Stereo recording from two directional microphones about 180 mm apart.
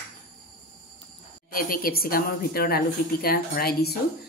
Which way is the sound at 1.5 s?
50° left (ahead or behind).